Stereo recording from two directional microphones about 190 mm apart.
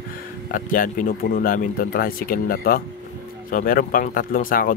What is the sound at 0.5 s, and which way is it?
Speech, 45° left (ahead or behind).